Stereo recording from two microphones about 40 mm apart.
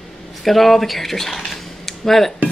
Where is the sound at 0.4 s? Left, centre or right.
Centre.